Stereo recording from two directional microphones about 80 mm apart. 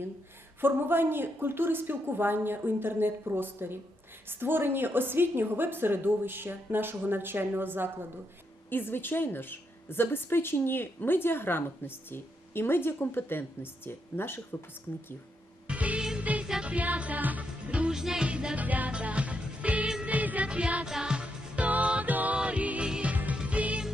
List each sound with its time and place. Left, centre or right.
0.6 s a woman's voice: right
8.7 s a woman's voice: left
15.6 s music: centre